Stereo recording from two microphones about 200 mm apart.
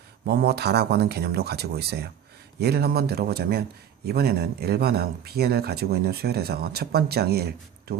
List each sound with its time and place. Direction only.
0.3 s speech: 50° right (ahead or behind)